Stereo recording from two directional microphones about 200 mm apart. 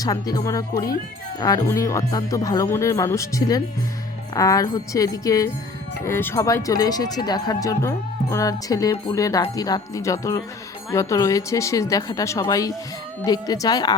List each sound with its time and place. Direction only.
0.0 s speech: 20° left (ahead or behind)